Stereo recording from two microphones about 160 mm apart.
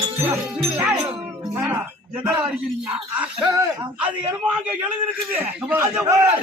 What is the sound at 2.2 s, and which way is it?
A man's voice, 5° right (ahead or behind).